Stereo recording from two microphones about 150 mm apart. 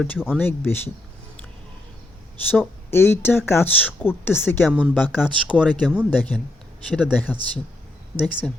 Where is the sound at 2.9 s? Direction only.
15° left (ahead or behind).